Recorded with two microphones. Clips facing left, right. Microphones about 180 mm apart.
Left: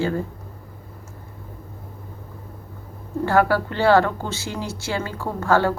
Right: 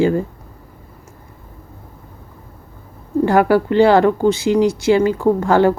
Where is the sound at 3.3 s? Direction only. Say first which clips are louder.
Right 5 dB; 15° right (ahead or behind).